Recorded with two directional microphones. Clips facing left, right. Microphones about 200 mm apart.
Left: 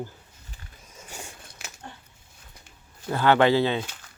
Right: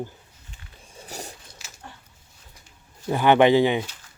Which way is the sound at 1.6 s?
55° left (ahead or behind).